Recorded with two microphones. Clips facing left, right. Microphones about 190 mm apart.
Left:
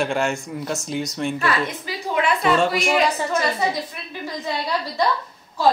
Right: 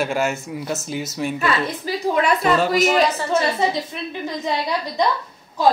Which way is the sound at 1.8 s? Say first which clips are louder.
Right 3 dB; 40° right (ahead or behind).